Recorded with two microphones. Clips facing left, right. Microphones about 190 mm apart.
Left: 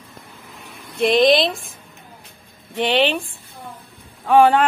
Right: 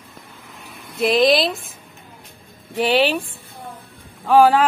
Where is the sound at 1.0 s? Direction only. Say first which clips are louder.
Left 1 dB; centre (ahead or behind).